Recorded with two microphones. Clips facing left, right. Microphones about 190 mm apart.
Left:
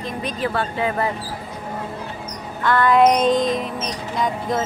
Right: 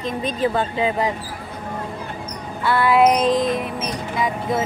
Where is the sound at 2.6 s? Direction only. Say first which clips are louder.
Left 1 dB; 10° right (ahead or behind).